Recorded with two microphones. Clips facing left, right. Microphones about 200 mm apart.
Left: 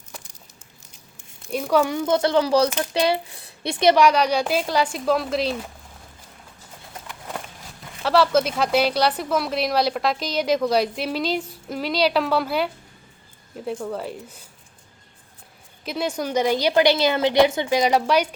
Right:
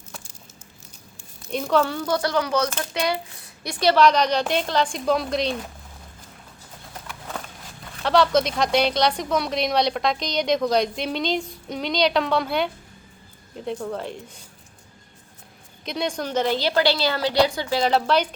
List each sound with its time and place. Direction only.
1.5 s a woman's voice: 10° left (ahead or behind)
7.1 s a sound: 10° left (ahead or behind)
8.0 s a woman's voice: 5° left (ahead or behind)
15.8 s a woman's voice: 5° left (ahead or behind)